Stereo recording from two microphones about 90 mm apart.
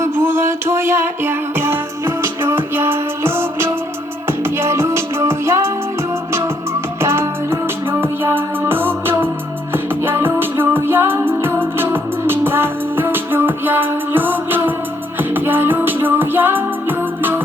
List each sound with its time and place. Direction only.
0.0 s music: 25° right (ahead or behind)
7.0 s music: 30° right (ahead or behind)